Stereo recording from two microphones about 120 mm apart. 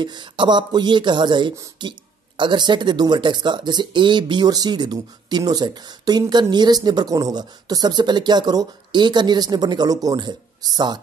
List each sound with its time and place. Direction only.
0.0 s speech: 40° right (ahead or behind)